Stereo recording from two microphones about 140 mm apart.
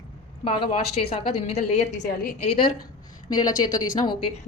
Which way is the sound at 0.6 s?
45° left (ahead or behind).